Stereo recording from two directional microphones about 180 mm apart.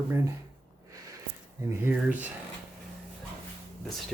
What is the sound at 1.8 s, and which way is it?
Speech, 10° right (ahead or behind).